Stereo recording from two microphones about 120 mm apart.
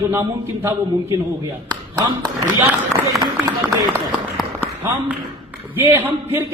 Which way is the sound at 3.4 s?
30° right (ahead or behind).